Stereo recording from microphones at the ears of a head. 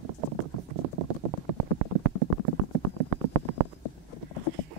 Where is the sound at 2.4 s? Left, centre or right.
Right.